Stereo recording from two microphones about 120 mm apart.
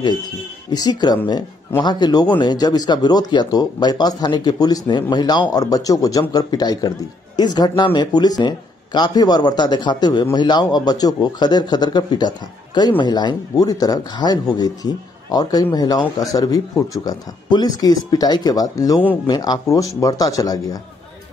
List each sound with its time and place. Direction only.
0.7 s speech: 35° left (ahead or behind)